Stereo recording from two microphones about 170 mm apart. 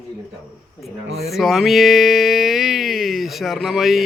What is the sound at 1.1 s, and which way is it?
Speech, 70° right (ahead or behind).